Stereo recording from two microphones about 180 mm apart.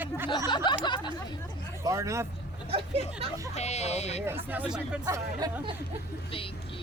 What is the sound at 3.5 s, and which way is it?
Speech, 40° left (ahead or behind).